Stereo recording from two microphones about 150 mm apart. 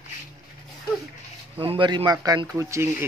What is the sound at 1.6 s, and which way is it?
Speech, 35° right (ahead or behind).